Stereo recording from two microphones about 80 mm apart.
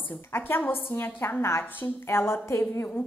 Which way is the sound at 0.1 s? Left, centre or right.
Left.